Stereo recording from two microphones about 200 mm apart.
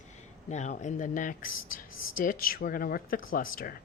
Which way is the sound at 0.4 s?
35° left (ahead or behind).